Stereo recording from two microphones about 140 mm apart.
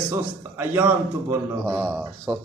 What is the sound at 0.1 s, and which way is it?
Speech, 15° right (ahead or behind).